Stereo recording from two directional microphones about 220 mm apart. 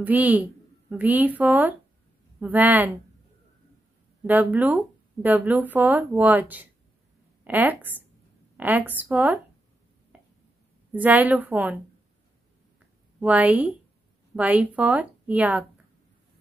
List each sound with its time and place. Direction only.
0.0 s speech: 5° right (ahead or behind)
4.3 s speech: 10° right (ahead or behind)
10.1 s a sound: 5° right (ahead or behind)
10.9 s speech: 5° right (ahead or behind)
13.2 s speech: 5° right (ahead or behind)